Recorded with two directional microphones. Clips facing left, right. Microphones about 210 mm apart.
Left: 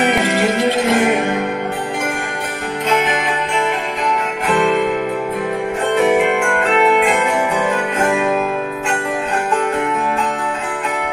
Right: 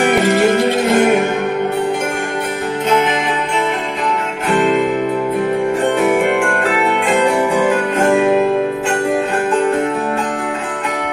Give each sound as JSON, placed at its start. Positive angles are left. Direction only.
{"t": 0.3, "sound": "music", "side_deg": -45}